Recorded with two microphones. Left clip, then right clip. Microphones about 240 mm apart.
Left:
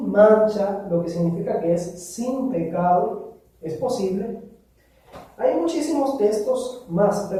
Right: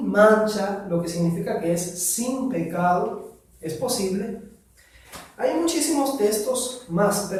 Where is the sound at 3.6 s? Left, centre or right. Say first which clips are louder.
Left 2 dB; right.